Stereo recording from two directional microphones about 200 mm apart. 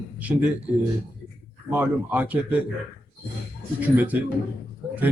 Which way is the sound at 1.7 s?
10° right (ahead or behind).